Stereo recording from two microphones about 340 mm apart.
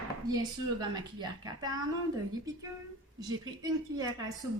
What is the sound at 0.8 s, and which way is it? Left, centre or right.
Speech, centre.